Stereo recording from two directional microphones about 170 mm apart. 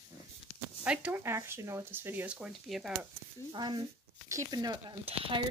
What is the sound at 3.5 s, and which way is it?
Speech, 25° right (ahead or behind).